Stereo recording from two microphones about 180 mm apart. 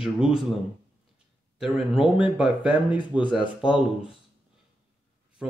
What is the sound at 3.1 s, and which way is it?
Speech, 25° left (ahead or behind).